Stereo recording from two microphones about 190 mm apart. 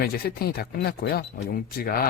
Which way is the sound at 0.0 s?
55° left (ahead or behind).